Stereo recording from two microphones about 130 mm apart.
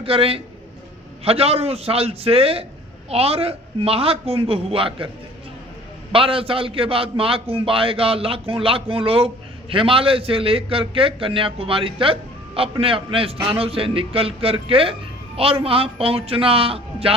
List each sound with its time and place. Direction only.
0.0 s a man's voice: 45° right (ahead or behind)
6.1 s a man's voice: 45° right (ahead or behind)